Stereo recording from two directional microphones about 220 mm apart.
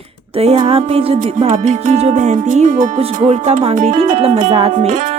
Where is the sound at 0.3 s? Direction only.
25° right (ahead or behind).